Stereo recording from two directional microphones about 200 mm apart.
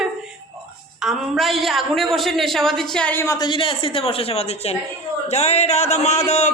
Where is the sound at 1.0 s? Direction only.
Centre (ahead or behind).